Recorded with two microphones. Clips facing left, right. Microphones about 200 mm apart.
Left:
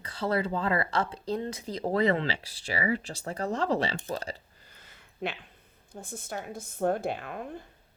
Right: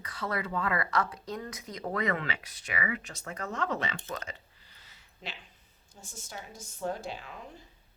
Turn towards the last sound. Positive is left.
turn(degrees=55)  # may be behind; listen again after turning